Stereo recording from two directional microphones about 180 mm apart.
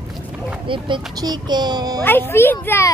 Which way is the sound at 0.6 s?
30° right (ahead or behind).